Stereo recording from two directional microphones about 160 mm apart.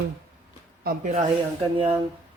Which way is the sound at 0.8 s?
50° right (ahead or behind).